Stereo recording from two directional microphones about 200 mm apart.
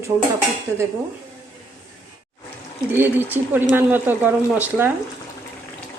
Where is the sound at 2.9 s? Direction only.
10° right (ahead or behind).